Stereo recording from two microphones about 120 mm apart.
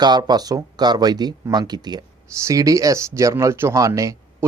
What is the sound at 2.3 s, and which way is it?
Speech, 25° right (ahead or behind).